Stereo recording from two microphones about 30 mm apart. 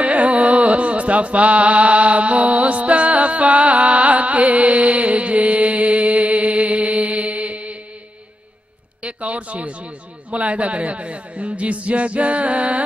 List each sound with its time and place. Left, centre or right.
0.0 s carnatic music: right
9.0 s speech: right